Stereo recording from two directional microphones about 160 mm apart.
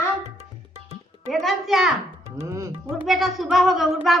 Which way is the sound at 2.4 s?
20° right (ahead or behind).